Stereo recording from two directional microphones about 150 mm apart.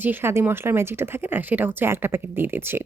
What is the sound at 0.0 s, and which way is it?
Speech, 15° right (ahead or behind).